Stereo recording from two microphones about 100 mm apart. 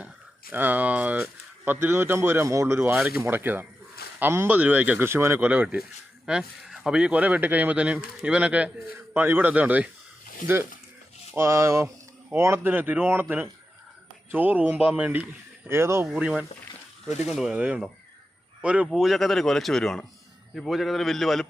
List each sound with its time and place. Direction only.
0.5 s speech: 20° right (ahead or behind)
11.3 s speech: 30° right (ahead or behind)
15.7 s speech: 25° right (ahead or behind)
16.0 s speech: 5° right (ahead or behind)
17.5 s speech: 10° right (ahead or behind)
18.9 s speech: centre (ahead or behind)